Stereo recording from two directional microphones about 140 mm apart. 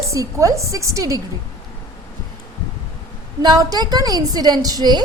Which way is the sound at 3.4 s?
25° right (ahead or behind).